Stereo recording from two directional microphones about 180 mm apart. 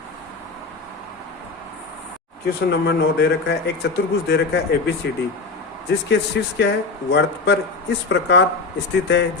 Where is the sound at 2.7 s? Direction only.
65° left (ahead or behind).